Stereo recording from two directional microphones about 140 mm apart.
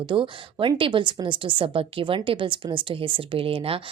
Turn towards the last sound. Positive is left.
turn(degrees=-40)  # may be behind; listen again after turning